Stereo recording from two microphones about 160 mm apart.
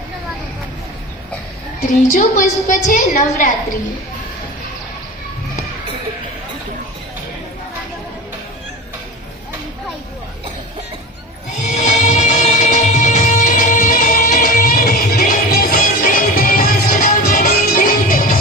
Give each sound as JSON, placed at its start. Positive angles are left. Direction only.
{"t": 1.9, "sound": "a woman's voice", "side_deg": 55}
{"t": 11.6, "sound": "music", "side_deg": 50}